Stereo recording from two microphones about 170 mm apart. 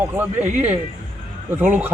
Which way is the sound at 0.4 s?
45° right (ahead or behind).